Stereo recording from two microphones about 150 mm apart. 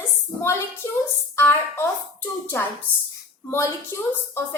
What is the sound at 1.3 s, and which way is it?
Speech, 15° left (ahead or behind).